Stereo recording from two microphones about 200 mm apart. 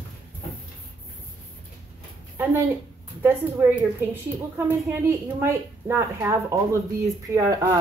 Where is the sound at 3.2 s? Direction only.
10° right (ahead or behind).